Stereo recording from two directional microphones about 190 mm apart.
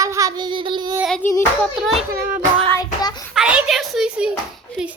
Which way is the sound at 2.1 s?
55° right (ahead or behind).